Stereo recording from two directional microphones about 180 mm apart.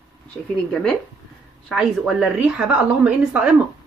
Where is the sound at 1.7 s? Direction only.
5° right (ahead or behind).